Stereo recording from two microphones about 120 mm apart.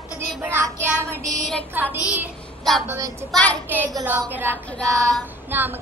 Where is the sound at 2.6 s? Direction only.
Centre (ahead or behind).